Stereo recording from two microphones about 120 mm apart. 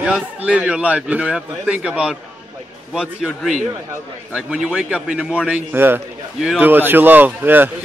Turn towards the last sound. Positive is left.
turn(degrees=-15)  # may be behind; listen again after turning